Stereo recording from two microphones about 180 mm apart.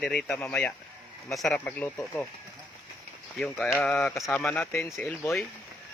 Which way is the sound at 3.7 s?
5° left (ahead or behind).